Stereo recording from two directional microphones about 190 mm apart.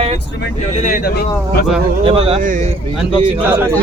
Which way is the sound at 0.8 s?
45° left (ahead or behind).